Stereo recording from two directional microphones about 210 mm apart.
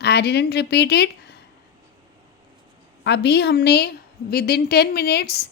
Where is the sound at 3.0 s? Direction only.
55° left (ahead or behind).